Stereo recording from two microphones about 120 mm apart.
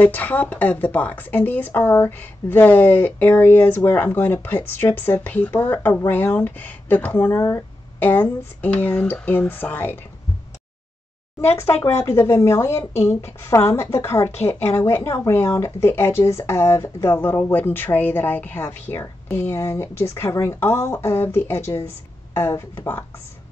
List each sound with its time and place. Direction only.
0.0 s speech: 15° left (ahead or behind)
11.4 s speech: 20° left (ahead or behind)